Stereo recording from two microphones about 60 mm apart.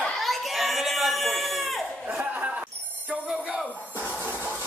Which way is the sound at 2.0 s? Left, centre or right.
Right.